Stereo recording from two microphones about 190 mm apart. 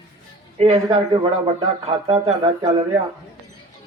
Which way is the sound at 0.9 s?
20° right (ahead or behind).